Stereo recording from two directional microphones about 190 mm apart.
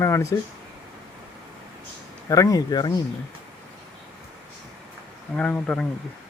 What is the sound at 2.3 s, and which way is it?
Speech, 15° left (ahead or behind).